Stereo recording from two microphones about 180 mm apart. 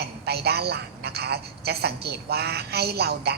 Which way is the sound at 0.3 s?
65° right (ahead or behind).